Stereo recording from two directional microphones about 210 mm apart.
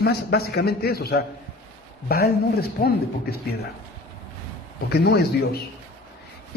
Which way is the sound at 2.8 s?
45° left (ahead or behind).